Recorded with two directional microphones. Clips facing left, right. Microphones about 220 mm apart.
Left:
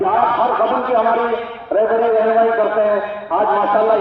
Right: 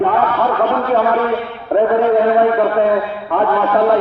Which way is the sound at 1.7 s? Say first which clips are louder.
Right 1 dB; 15° right (ahead or behind).